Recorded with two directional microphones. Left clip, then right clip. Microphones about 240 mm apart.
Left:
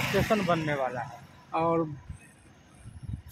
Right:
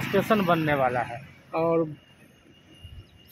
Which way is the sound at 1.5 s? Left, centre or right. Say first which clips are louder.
Right 3 dB; centre.